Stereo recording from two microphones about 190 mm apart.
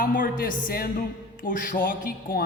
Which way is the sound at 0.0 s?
45° left (ahead or behind).